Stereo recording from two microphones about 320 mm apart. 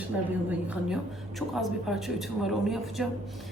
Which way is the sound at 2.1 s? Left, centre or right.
Centre.